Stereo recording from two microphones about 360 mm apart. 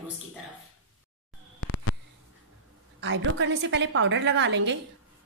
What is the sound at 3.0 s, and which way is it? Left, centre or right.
A woman's voice, right.